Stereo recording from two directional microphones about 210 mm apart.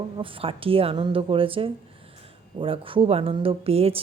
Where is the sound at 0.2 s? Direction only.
25° right (ahead or behind).